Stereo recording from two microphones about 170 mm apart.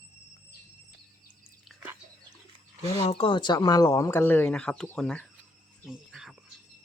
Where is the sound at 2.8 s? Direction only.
35° left (ahead or behind); by 5.2 s 5° left (ahead or behind).